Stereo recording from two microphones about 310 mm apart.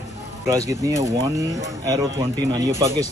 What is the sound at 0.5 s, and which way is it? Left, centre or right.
Speech, centre.